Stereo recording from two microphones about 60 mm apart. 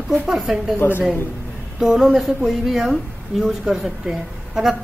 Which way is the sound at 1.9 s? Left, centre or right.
Centre.